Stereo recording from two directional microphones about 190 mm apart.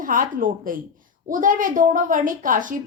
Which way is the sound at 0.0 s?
45° right (ahead or behind).